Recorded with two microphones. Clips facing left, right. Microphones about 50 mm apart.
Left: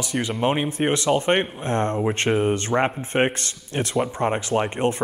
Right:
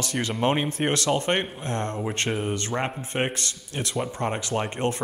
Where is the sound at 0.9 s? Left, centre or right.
Centre.